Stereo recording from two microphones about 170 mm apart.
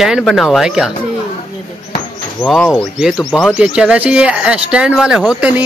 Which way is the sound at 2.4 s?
10° left (ahead or behind).